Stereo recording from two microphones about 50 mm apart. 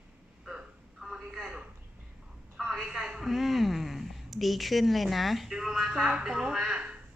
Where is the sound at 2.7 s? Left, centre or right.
Centre.